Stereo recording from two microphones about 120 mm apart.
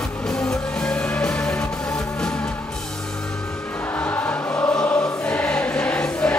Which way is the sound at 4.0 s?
15° left (ahead or behind).